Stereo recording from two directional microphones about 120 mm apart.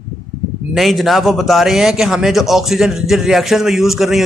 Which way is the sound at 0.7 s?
Centre (ahead or behind).